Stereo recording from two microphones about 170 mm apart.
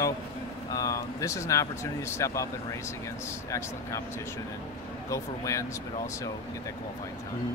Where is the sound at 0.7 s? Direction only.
20° left (ahead or behind).